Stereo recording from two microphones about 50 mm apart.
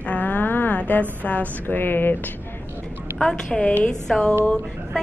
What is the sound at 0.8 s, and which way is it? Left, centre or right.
A woman's voice, left.